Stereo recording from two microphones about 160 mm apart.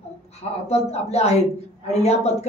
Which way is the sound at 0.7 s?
40° left (ahead or behind).